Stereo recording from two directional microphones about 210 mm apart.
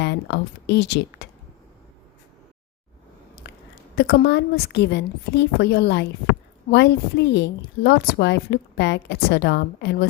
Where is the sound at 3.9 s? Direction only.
50° left (ahead or behind).